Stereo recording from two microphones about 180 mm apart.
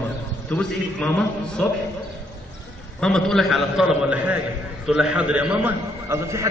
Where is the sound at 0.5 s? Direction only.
5° left (ahead or behind).